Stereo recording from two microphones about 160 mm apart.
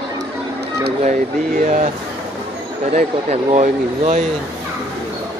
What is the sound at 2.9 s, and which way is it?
Speech, 45° right (ahead or behind).